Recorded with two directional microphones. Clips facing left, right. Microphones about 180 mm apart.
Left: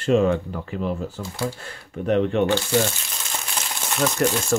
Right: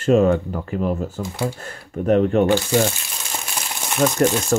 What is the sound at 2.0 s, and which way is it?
Speech, 45° right (ahead or behind).